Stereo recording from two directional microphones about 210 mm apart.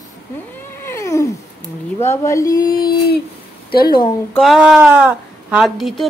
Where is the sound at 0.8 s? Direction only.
15° left (ahead or behind).